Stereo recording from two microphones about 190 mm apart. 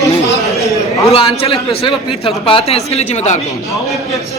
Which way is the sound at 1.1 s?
30° left (ahead or behind).